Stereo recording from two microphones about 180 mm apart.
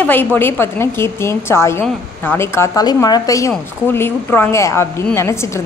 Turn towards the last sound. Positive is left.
turn(degrees=15)  # may be behind; listen again after turning